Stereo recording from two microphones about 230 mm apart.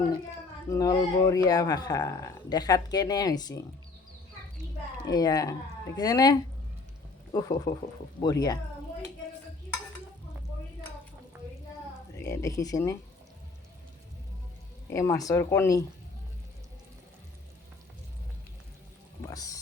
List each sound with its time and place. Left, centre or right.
0.7 s speech: centre
5.0 s speech: centre
7.3 s speech: centre
12.1 s speech: centre
14.8 s speech: centre
19.2 s speech: centre